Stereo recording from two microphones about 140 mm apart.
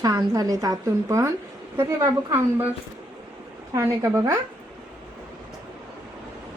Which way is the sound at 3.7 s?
20° right (ahead or behind).